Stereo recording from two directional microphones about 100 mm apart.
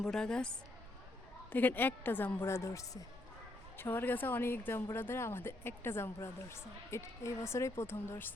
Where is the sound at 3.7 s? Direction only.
20° left (ahead or behind).